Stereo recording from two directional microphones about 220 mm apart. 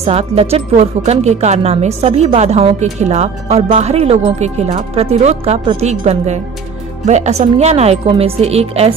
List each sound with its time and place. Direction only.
0.0 s speech: 25° right (ahead or behind)